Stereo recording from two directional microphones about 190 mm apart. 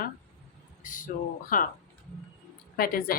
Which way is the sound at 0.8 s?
45° left (ahead or behind).